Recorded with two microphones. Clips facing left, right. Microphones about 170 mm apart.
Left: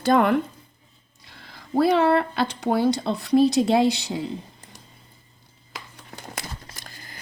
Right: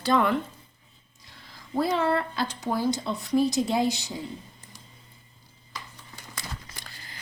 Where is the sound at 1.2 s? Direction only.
65° left (ahead or behind).